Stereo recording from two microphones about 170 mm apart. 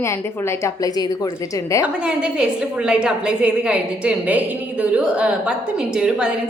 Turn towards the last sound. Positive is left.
turn(degrees=-5)  # may be behind; listen again after turning